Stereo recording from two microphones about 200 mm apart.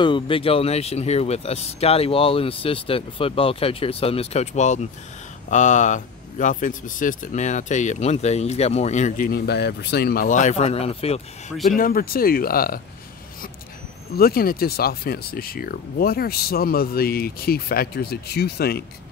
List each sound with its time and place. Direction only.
0.0 s speech: 25° left (ahead or behind)
11.7 s speech: 45° left (ahead or behind)
14.1 s speech: 50° left (ahead or behind)